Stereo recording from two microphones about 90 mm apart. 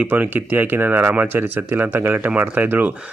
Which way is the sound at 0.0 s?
20° right (ahead or behind).